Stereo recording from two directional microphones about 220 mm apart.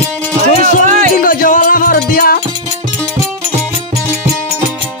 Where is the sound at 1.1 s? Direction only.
35° left (ahead or behind).